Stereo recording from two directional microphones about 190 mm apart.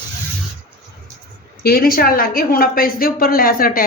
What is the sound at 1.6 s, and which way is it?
A woman's voice, 50° left (ahead or behind).